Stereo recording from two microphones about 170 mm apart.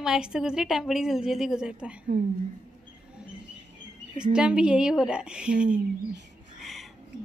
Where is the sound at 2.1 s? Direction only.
75° right (ahead or behind).